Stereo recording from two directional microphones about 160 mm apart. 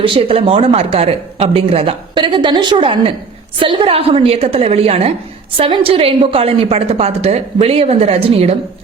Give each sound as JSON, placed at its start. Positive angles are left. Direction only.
{"t": 0.0, "sound": "speech", "side_deg": -35}